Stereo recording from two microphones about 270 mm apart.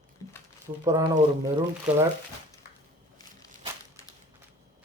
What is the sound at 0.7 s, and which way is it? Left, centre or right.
Speech, centre.